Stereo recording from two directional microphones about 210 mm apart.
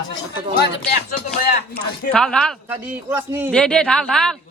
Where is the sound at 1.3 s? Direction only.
45° left (ahead or behind).